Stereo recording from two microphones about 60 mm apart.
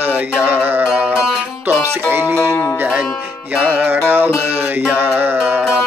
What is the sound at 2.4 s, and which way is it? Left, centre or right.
Music, left.